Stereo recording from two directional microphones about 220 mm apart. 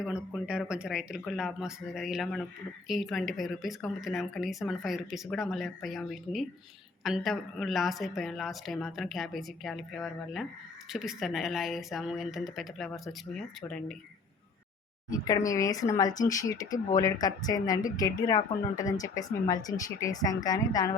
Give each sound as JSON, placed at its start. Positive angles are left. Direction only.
{"t": 0.3, "sound": "speech", "side_deg": -5}
{"t": 15.2, "sound": "speech", "side_deg": 15}
{"t": 16.6, "sound": "speech", "side_deg": 35}
{"t": 17.0, "sound": "speech", "side_deg": 15}
{"t": 18.8, "sound": "speech", "side_deg": 35}
{"t": 19.0, "sound": "speech", "side_deg": 15}